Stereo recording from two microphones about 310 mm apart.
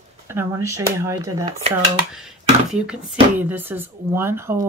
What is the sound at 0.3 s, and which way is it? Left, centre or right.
A woman's voice, centre.